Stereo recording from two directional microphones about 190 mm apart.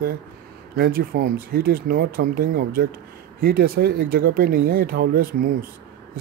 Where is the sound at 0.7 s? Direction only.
55° right (ahead or behind).